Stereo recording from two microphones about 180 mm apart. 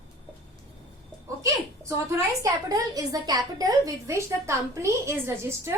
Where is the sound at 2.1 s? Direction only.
20° right (ahead or behind).